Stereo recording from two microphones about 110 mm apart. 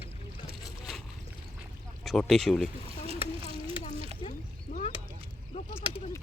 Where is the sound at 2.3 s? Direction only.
Centre (ahead or behind).